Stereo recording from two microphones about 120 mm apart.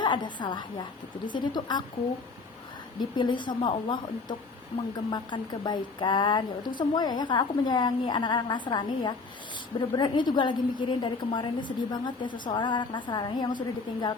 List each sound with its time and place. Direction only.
0.0 s a woman's voice: 40° left (ahead or behind)
3.0 s a woman's voice: 40° left (ahead or behind)